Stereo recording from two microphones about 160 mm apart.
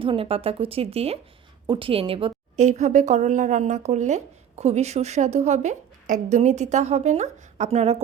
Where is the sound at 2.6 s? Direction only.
50° right (ahead or behind).